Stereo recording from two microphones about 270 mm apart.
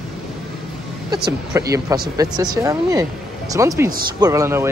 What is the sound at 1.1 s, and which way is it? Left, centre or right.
Speech, centre.